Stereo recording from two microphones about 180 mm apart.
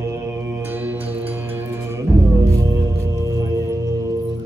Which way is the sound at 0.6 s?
10° right (ahead or behind).